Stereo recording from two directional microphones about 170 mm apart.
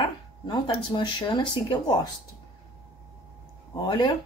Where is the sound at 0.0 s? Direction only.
25° left (ahead or behind).